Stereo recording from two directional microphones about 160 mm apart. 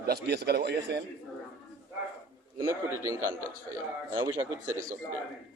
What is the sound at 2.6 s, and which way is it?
Speech, 20° right (ahead or behind).